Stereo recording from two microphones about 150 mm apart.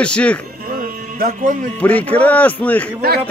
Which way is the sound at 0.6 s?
65° right (ahead or behind).